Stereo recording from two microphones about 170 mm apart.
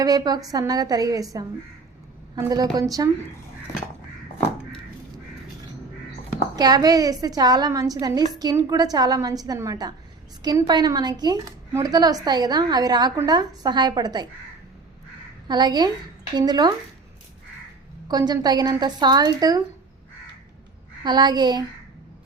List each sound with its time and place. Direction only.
0.0 s a woman's voice: 20° right (ahead or behind)
6.6 s a woman's voice: 25° right (ahead or behind)
15.4 s a woman's voice: 25° right (ahead or behind)
18.1 s a woman's voice: 25° right (ahead or behind)
21.0 s a woman's voice: 25° right (ahead or behind)